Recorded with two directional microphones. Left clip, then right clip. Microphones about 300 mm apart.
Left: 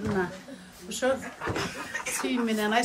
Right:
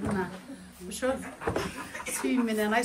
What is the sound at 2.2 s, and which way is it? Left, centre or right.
Speech, centre.